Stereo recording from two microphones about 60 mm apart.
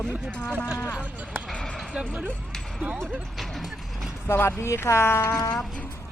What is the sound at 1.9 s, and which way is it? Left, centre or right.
Speech, right.